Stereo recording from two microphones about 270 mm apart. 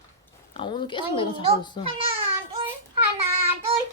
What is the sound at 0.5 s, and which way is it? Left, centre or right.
Speech, centre.